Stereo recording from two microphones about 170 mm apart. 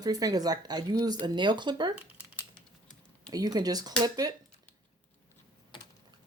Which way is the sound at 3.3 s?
20° right (ahead or behind).